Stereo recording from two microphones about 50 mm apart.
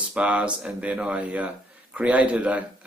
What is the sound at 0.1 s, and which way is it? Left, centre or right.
Speech, right.